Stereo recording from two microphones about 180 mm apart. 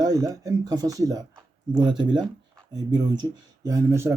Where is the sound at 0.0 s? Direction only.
20° right (ahead or behind).